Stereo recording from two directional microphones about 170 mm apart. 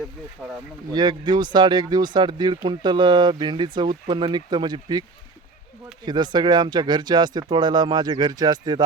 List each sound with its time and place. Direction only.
0.4 s speech: 5° left (ahead or behind)
0.9 s speech: 25° right (ahead or behind)
6.1 s speech: 25° right (ahead or behind)